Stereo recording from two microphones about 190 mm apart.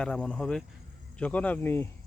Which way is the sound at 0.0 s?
5° left (ahead or behind).